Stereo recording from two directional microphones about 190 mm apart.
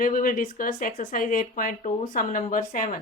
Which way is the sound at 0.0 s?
45° left (ahead or behind).